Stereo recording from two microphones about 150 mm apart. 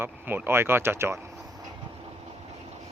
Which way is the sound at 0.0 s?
15° right (ahead or behind).